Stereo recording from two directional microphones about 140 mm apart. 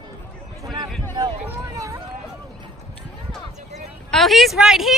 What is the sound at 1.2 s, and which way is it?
Speech, 30° right (ahead or behind).